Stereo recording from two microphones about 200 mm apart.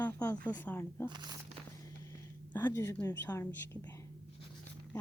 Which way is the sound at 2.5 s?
10° left (ahead or behind).